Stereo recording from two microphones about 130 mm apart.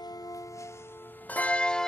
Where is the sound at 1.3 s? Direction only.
10° left (ahead or behind).